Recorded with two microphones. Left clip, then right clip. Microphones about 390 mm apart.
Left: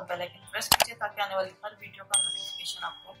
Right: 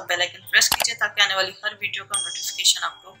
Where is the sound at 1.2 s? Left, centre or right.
Left.